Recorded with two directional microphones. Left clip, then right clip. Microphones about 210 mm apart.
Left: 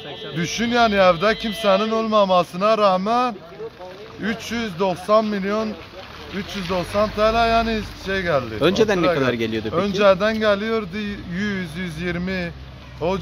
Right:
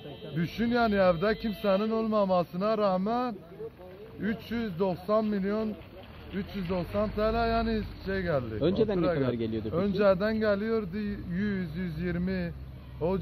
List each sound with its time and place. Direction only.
0.4 s a man's voice: 5° left (ahead or behind)
6.7 s speech: 5° left (ahead or behind)
8.5 s speech: 25° left (ahead or behind)
9.8 s a man's voice: 5° left (ahead or behind)